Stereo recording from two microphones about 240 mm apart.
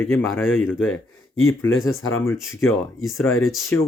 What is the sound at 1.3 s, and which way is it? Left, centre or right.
Speech, left.